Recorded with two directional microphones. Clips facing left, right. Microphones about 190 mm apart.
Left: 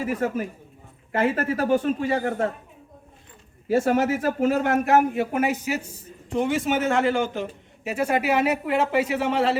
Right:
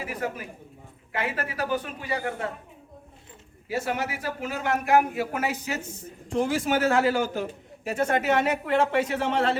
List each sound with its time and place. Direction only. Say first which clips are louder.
0.0 s speech: left 7 dB; 45° left (ahead or behind)
3.7 s speech: left 9 dB; 50° left (ahead or behind)
4.9 s speech: left 2 dB; 25° left (ahead or behind)
6.3 s speech: left 1 dB; centre (ahead or behind)